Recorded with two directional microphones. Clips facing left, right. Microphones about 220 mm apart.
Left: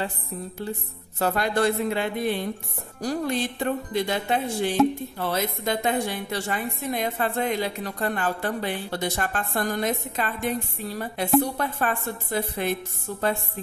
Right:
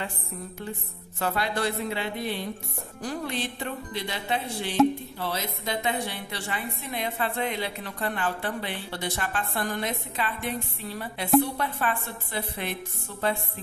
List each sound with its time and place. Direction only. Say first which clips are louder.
1.2 s a woman's voice: left 5 dB; 45° left (ahead or behind)